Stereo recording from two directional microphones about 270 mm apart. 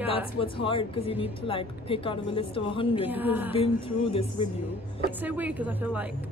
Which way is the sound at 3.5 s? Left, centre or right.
Left.